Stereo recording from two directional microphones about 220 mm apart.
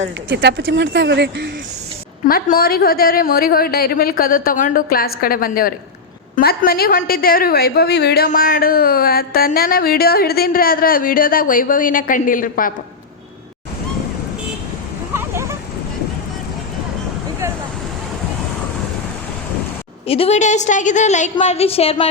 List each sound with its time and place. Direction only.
0.3 s speech: 55° right (ahead or behind)
2.2 s a woman's voice: 40° left (ahead or behind)
15.1 s a sound: 10° right (ahead or behind)
20.1 s a woman's voice: 25° left (ahead or behind)